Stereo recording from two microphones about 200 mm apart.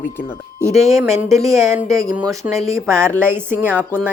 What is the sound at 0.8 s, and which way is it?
Speech, 15° right (ahead or behind).